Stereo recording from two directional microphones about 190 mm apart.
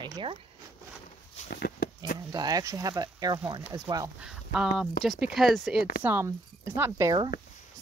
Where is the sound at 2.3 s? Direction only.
20° right (ahead or behind).